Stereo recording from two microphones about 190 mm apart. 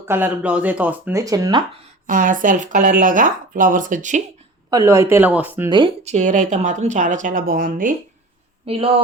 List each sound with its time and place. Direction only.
0.0 s speech: 10° right (ahead or behind)
2.0 s speech: 45° right (ahead or behind)
4.7 s speech: 15° right (ahead or behind)
5.6 s speech: 25° right (ahead or behind)
6.1 s speech: 40° right (ahead or behind)
8.6 s speech: 30° right (ahead or behind)